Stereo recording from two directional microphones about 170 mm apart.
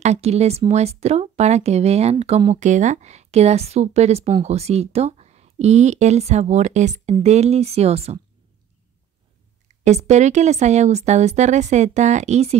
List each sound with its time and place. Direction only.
0.0 s speech: 40° right (ahead or behind)
9.8 s a woman's voice: 40° right (ahead or behind)